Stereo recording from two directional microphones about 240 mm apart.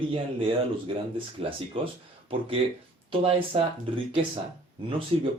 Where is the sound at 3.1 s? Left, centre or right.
Right.